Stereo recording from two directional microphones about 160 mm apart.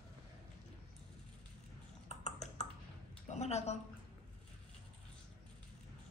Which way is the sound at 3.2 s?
45° left (ahead or behind).